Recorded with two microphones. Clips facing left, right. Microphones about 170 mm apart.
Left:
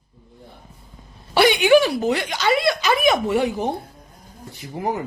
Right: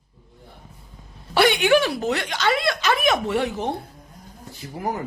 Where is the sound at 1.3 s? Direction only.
Centre (ahead or behind).